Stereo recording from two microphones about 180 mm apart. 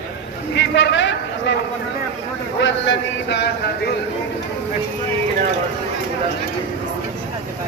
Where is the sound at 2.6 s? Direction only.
90° left; by 3.5 s 70° left (ahead or behind).